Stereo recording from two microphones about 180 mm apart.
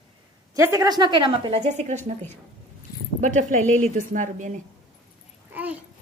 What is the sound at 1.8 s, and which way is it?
Speech, 45° right (ahead or behind).